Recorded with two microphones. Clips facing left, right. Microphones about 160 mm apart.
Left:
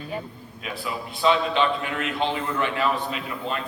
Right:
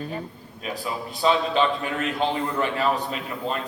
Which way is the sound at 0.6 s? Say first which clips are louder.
Right 2 dB; 35° right (ahead or behind).